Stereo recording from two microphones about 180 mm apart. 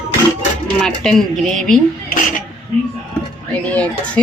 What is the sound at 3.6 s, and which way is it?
Speech, 5° left (ahead or behind).